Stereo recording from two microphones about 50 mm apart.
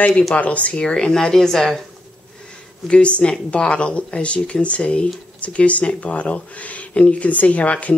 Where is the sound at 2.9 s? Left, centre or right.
Left.